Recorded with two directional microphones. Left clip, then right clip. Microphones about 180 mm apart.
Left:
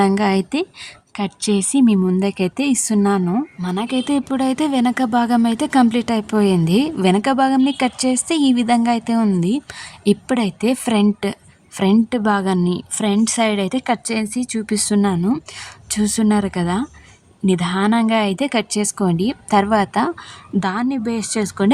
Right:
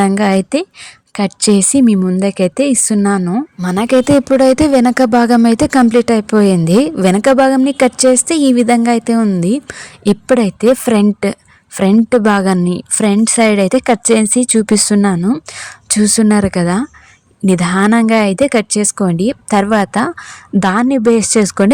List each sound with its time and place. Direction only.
0.0 s a woman's voice: 25° right (ahead or behind)
3.6 s a woman's voice: 35° right (ahead or behind)
20.6 s speech: 35° right (ahead or behind)